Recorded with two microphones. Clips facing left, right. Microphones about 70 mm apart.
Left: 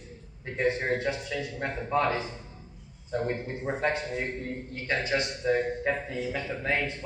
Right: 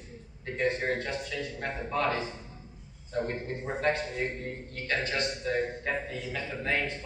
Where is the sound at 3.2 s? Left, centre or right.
Centre.